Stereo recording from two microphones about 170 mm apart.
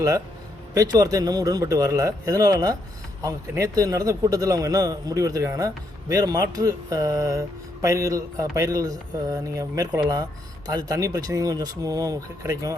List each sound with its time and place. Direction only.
0.7 s a man's voice: 20° right (ahead or behind)